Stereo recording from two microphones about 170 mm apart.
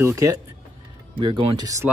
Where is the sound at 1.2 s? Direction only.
30° right (ahead or behind).